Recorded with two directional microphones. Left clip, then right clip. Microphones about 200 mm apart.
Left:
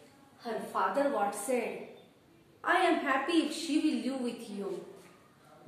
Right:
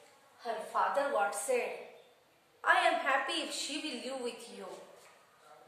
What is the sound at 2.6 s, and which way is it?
A woman's voice, 15° right (ahead or behind).